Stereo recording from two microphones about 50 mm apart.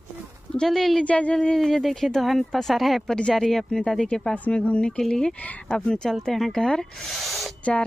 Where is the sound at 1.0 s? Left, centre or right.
Left.